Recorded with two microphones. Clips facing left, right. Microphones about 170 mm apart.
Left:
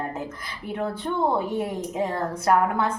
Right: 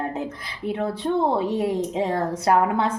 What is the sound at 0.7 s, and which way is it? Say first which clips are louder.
Speech: right 4 dB; 20° right (ahead or behind).